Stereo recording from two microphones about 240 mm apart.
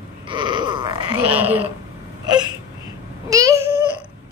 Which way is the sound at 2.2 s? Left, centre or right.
Centre.